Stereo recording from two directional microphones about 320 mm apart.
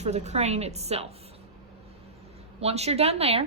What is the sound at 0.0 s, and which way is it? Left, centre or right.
A woman's voice, right.